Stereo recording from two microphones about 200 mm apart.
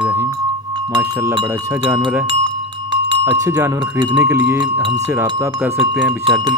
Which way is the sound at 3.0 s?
20° right (ahead or behind).